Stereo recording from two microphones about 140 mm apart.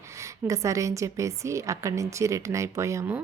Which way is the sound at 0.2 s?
20° right (ahead or behind).